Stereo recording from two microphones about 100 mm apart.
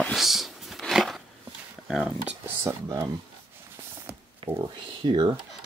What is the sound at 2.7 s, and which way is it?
Speech, 25° right (ahead or behind).